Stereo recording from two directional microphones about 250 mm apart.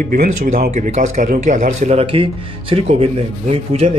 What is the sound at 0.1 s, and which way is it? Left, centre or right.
Speech, right.